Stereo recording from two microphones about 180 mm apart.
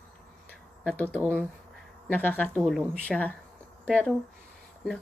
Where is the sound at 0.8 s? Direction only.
5° left (ahead or behind).